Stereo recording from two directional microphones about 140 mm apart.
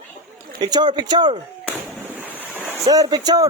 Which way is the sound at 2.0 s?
15° right (ahead or behind).